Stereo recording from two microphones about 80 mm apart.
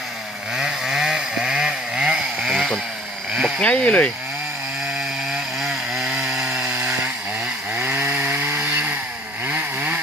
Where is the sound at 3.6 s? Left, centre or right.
Centre.